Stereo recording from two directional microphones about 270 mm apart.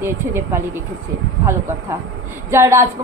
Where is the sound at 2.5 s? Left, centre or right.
Centre.